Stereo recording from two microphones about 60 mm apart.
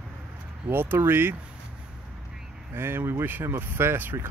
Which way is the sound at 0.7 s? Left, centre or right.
Right.